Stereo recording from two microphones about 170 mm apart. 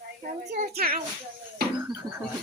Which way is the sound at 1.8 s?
15° right (ahead or behind).